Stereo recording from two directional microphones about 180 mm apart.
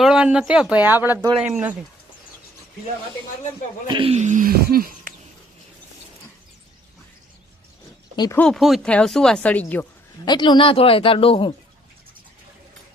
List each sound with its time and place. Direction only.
0.0 s speech: 5° right (ahead or behind)
3.8 s speech: 30° right (ahead or behind); by 5.1 s 55° right (ahead or behind)
8.1 s speech: 20° left (ahead or behind)
8.4 s speech: centre (ahead or behind)
10.2 s speech: 25° left (ahead or behind)